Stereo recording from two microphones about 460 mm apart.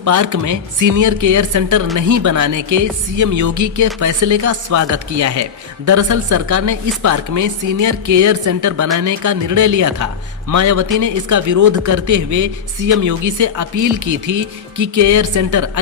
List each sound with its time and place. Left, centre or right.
0.0 s speech: right